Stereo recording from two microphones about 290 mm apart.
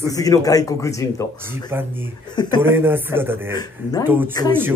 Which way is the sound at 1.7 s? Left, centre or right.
Centre.